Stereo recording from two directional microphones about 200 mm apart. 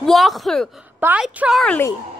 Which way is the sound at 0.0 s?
Centre (ahead or behind).